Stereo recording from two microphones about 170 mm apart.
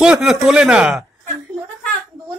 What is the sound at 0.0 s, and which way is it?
Speech, 5° right (ahead or behind).